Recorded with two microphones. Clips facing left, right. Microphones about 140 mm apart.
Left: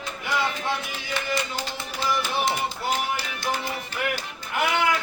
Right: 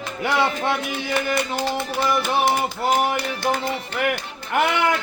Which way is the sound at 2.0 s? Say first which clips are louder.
Right 4 dB; 55° right (ahead or behind).